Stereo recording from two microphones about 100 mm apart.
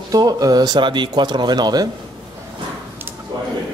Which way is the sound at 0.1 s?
40° right (ahead or behind).